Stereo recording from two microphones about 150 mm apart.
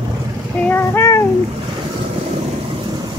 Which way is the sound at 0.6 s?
15° left (ahead or behind).